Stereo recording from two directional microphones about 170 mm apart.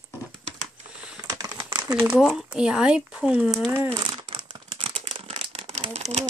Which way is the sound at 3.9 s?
30° right (ahead or behind).